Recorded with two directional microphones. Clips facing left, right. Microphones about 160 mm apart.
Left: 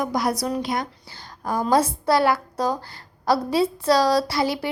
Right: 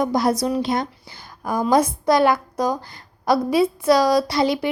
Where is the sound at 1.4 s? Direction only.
15° right (ahead or behind).